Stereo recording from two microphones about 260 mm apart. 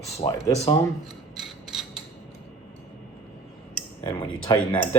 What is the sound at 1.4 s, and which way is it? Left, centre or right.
Mechanisms, centre.